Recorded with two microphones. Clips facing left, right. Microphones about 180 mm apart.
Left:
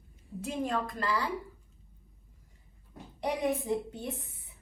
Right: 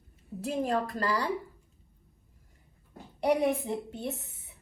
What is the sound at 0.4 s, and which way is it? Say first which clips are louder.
Speech: right 3 dB; 35° right (ahead or behind).